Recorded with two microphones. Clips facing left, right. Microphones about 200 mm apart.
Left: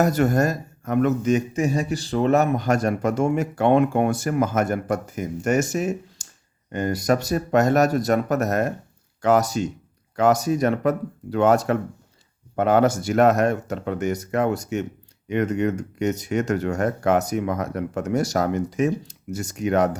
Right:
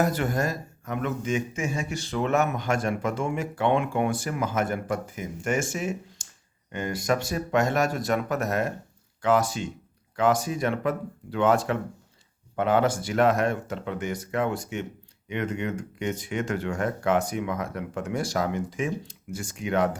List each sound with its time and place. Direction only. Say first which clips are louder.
0.0 s speech: left 6 dB; 45° left (ahead or behind)